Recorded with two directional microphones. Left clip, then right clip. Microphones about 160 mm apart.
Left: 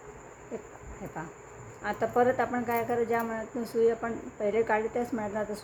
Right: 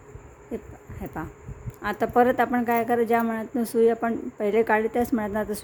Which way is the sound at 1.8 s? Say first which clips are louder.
Right 5 dB; 90° right.